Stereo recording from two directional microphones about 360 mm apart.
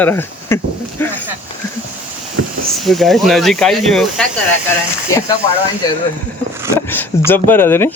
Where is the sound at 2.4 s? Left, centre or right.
Right.